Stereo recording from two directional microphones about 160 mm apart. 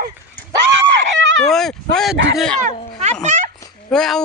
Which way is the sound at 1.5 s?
Centre (ahead or behind).